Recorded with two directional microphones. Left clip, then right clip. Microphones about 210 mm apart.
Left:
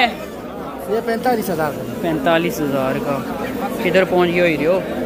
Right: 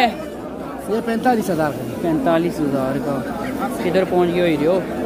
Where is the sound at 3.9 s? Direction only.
Centre (ahead or behind).